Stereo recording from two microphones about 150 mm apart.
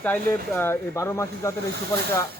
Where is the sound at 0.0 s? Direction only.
15° left (ahead or behind).